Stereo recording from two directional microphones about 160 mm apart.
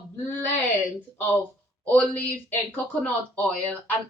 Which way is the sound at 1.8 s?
10° left (ahead or behind).